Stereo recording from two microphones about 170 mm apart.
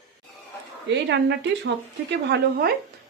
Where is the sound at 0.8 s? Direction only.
90° right.